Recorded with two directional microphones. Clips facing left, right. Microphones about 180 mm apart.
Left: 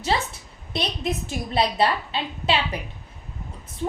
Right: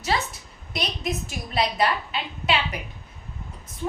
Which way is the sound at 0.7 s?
30° left (ahead or behind).